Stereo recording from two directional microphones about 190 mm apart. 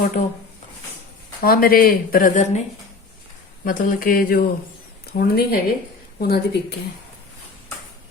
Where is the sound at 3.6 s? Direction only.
45° left (ahead or behind).